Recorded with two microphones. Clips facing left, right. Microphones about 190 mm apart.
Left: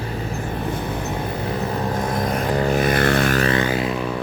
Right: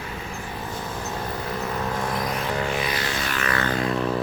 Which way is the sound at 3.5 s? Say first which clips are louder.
Left 3 dB; 10° left (ahead or behind).